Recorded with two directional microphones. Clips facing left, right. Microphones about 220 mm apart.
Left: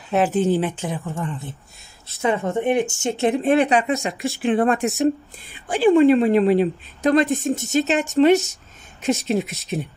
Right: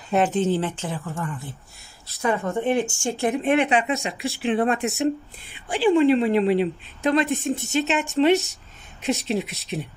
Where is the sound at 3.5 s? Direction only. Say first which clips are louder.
Left 2 dB; 40° left (ahead or behind).